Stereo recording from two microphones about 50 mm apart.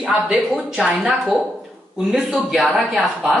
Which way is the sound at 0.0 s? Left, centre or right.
Centre.